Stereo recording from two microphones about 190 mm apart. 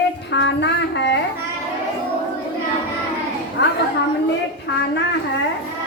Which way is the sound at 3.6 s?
65° left (ahead or behind).